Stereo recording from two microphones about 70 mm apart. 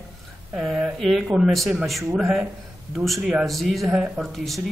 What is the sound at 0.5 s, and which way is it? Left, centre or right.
Speech, centre.